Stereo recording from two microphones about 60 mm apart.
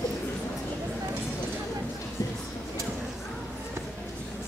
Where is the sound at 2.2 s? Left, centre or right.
Left.